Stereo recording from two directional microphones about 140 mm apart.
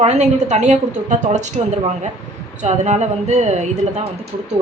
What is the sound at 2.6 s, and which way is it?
Speech, 55° right (ahead or behind).